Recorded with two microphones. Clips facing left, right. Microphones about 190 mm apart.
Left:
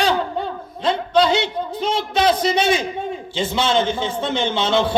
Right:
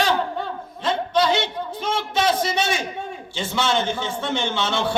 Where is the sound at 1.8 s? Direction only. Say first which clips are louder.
Left 3 dB; 15° left (ahead or behind).